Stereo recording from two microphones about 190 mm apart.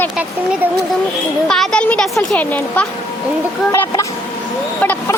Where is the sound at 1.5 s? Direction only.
5° left (ahead or behind).